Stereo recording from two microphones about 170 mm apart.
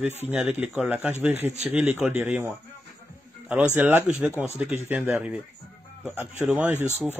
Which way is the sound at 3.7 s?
10° right (ahead or behind).